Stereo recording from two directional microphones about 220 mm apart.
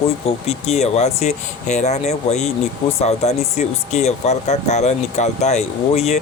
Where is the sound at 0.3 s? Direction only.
30° left (ahead or behind).